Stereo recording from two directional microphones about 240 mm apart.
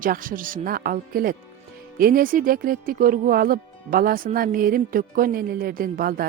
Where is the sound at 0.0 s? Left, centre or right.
Right.